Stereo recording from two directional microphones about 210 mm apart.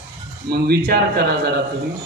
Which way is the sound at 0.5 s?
50° right (ahead or behind).